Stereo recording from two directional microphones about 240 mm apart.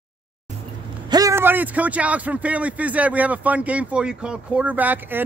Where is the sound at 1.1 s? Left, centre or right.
Centre.